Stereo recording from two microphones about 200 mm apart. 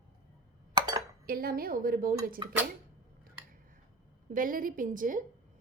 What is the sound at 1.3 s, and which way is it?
Speech, 45° right (ahead or behind).